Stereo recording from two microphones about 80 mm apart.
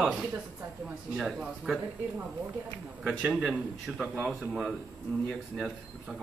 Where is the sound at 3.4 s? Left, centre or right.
Centre.